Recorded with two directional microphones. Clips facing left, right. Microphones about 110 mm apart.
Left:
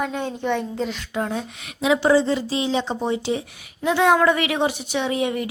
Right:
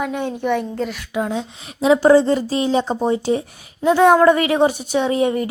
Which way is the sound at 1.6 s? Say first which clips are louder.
Right 6 dB; 35° right (ahead or behind).